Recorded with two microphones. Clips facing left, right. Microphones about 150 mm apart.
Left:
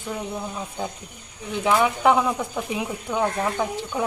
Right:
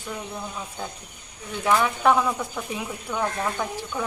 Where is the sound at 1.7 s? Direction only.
15° left (ahead or behind).